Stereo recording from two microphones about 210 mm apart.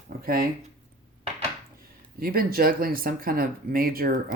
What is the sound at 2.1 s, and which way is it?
Speech, 45° right (ahead or behind).